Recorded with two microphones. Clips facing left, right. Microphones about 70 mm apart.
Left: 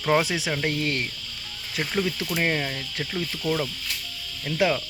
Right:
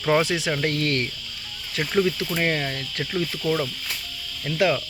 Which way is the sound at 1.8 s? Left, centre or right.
Centre.